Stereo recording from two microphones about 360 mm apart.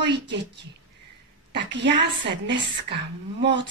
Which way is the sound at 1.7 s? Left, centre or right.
Right.